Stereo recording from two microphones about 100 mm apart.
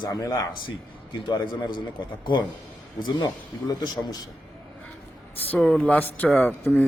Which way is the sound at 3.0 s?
50° left (ahead or behind).